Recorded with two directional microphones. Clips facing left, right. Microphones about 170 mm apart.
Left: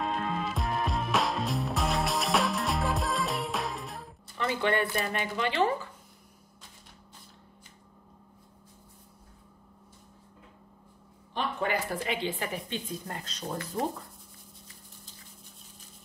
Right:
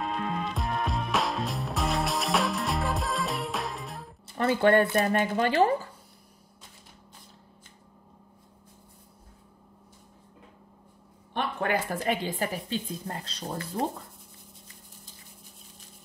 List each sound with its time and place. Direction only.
0.0 s music: centre (ahead or behind)
4.4 s speech: 50° right (ahead or behind)
11.3 s speech: 50° right (ahead or behind); by 13.8 s 30° right (ahead or behind)